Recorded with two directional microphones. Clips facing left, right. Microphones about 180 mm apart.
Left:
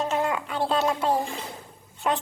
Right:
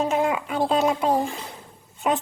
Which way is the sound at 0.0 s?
10° right (ahead or behind).